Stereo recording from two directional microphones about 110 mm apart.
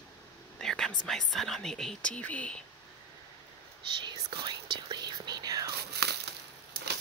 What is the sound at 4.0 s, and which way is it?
Speech, 45° right (ahead or behind).